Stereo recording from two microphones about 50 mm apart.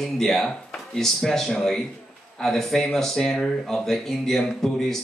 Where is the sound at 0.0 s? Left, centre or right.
Centre.